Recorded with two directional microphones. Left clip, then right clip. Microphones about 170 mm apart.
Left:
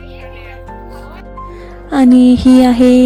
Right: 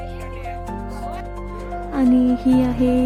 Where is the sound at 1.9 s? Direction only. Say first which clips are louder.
Left 10 dB; 45° left (ahead or behind).